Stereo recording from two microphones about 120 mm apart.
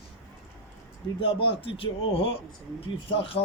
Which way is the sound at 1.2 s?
45° left (ahead or behind).